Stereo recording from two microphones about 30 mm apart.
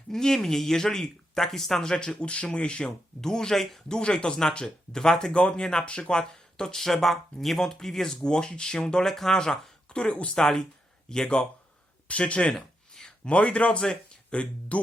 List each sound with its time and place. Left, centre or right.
0.1 s speech: centre
1.8 s speech: left
2.8 s speech: centre
5.3 s speech: left
6.7 s speech: centre
8.2 s speech: left
9.0 s speech: centre
9.4 s a sound: left
10.0 s speech: left
10.3 s speech: centre
12.3 s speech: left